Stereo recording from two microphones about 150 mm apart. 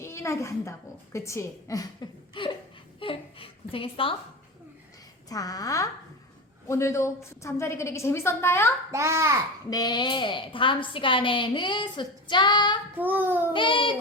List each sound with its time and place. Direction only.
0.0 s a woman's voice: 20° left (ahead or behind)
3.0 s a sound: 35° left (ahead or behind)
5.3 s a woman's voice: 25° left (ahead or behind)
8.9 s a child's voice: 20° right (ahead or behind)
9.6 s a woman's voice: 25° left (ahead or behind)
13.0 s a child's voice: 10° right (ahead or behind)
13.5 s a woman's voice: 35° left (ahead or behind)